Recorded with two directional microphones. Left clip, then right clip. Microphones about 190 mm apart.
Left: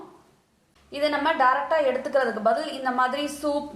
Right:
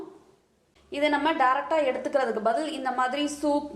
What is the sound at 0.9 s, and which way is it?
A woman's voice, 25° right (ahead or behind).